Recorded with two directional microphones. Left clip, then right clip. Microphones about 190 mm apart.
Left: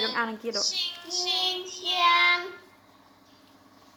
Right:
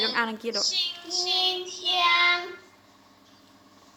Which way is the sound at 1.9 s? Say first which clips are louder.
Even; 10° left (ahead or behind).